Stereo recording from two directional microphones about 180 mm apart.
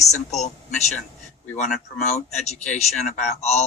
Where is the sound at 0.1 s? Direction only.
40° left (ahead or behind).